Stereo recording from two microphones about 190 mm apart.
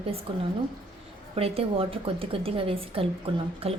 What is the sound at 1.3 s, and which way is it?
A woman's voice, 30° right (ahead or behind).